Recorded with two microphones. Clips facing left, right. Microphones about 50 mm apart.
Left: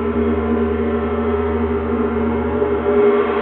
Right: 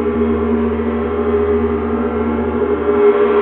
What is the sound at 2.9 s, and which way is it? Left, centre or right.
Gong, centre.